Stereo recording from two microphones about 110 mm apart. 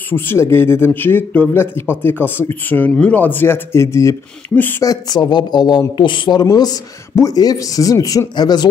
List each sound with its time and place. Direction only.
0.1 s speech: 20° left (ahead or behind)
4.6 s speech: 15° left (ahead or behind)
4.8 s speech: 35° left (ahead or behind)